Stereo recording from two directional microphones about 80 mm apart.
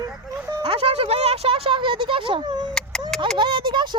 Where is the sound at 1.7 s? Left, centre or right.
Right.